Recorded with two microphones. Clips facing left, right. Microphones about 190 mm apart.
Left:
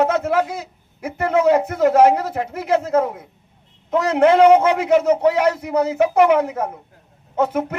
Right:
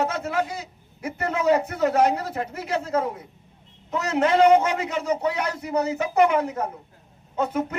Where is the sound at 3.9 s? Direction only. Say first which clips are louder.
Left 7 dB; 70° left (ahead or behind).